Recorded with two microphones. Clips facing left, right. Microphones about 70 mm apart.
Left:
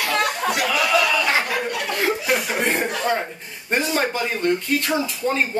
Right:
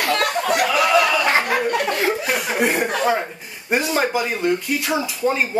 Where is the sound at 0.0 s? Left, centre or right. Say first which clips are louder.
Right 2 dB; right.